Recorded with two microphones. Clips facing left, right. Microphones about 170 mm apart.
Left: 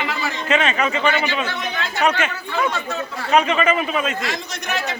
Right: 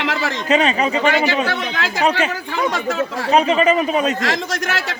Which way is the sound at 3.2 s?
35° right (ahead or behind).